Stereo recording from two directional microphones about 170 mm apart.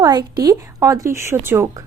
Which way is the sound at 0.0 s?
20° right (ahead or behind).